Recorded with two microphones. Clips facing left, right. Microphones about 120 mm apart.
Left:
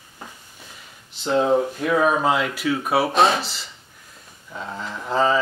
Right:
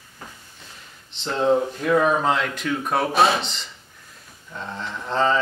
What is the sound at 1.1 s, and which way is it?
Speech, 10° left (ahead or behind).